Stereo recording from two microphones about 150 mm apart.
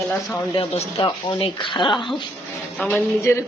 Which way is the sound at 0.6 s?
40° left (ahead or behind).